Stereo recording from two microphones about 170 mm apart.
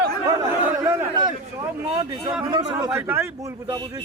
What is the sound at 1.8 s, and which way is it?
Speech, 20° right (ahead or behind).